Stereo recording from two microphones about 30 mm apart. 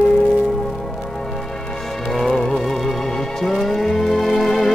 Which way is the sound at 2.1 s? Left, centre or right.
Centre.